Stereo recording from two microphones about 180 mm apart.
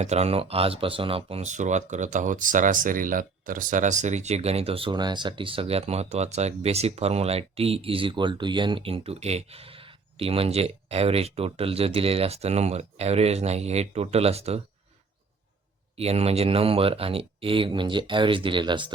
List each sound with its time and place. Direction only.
0.0 s speech: 35° right (ahead or behind)
16.0 s speech: 35° right (ahead or behind)